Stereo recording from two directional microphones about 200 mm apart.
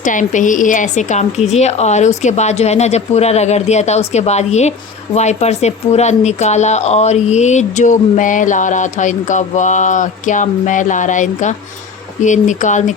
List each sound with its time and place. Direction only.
0.0 s speech: 40° left (ahead or behind)